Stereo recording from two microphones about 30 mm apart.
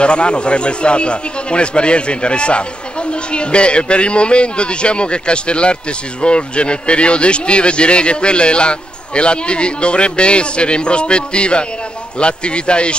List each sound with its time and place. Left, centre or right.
0.0 s speech: left